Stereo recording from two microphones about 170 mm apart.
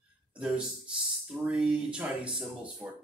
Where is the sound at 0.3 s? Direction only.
5° right (ahead or behind).